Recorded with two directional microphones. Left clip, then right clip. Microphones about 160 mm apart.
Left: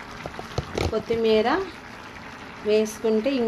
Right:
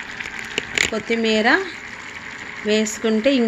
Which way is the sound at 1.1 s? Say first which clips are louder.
Right 2 dB; 35° right (ahead or behind).